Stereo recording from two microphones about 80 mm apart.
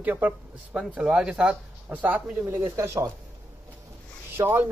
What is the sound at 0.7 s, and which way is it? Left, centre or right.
Speech, centre.